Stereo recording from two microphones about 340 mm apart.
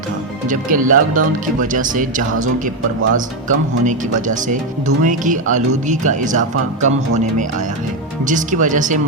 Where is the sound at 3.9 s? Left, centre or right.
Right.